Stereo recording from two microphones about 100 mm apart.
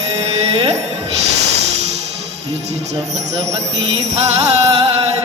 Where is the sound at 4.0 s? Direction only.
90° right.